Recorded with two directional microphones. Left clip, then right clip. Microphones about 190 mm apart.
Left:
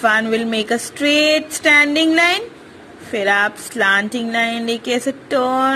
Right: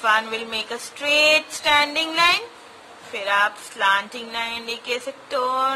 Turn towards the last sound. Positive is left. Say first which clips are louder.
# left 5 dB
turn(degrees=25)  # may be behind; listen again after turning